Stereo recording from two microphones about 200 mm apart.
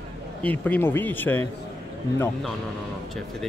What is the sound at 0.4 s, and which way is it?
Speech, 10° left (ahead or behind).